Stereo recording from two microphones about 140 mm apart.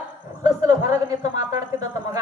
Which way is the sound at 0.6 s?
20° right (ahead or behind).